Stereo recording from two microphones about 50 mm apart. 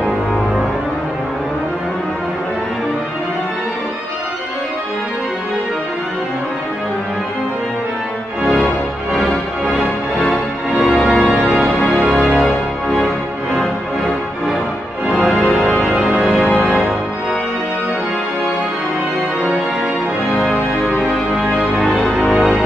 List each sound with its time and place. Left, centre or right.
10.3 s music: centre
15.0 s music: centre
21.3 s music: centre